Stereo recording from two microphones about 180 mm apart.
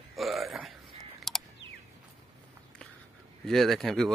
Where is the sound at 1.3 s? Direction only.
Centre (ahead or behind).